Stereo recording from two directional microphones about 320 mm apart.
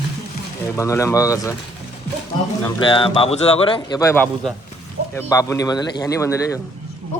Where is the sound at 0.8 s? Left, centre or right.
Centre.